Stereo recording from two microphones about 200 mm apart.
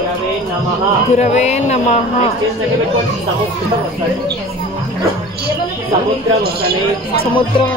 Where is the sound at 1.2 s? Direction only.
35° left (ahead or behind).